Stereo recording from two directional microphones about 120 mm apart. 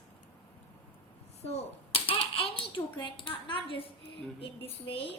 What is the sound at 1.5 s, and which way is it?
A child's voice, 55° left (ahead or behind).